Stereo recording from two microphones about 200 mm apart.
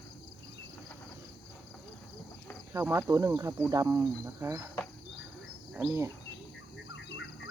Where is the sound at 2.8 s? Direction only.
15° right (ahead or behind).